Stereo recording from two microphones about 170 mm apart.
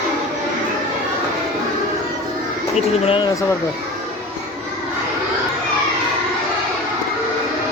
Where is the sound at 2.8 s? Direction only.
30° left (ahead or behind).